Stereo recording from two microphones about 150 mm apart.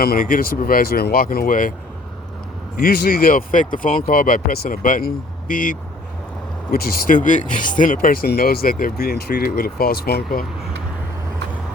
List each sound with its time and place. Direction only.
0.0 s speech: 80° left
2.7 s speech: 80° left; by 5.7 s 60° left (ahead or behind)
6.7 s speech: 85° left; by 7.9 s 60° left (ahead or behind)
8.0 s speech: 70° left (ahead or behind); by 10.2 s 90° left